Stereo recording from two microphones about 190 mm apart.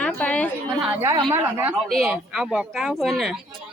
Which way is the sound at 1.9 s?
Centre (ahead or behind).